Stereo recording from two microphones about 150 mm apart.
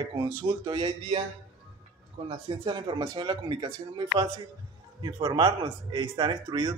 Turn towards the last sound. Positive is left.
turn(degrees=-30)  # may be behind; listen again after turning